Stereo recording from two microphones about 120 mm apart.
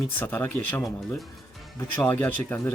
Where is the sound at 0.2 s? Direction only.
15° left (ahead or behind).